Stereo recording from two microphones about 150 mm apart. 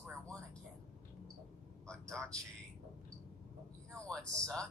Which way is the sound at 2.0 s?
20° right (ahead or behind).